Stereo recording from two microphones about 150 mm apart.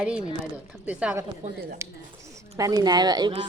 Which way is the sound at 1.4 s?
50° right (ahead or behind).